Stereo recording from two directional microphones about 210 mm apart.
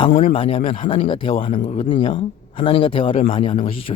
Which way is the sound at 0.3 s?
25° left (ahead or behind).